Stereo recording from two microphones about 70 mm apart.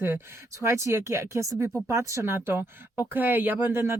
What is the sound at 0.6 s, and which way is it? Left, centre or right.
Speech, right.